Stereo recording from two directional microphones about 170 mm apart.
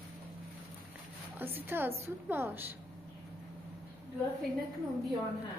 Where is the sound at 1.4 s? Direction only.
10° right (ahead or behind).